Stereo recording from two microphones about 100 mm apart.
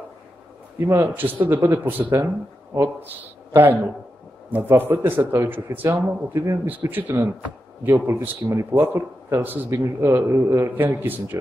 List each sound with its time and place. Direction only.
0.7 s a man's voice: 25° right (ahead or behind)